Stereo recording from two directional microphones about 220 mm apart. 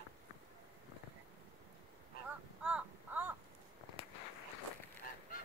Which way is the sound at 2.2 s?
5° right (ahead or behind).